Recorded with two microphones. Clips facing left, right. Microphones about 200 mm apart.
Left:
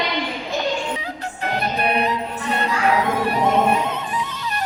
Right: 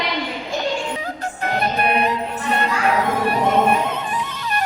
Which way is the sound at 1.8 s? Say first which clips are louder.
Right 1 dB; 50° right (ahead or behind).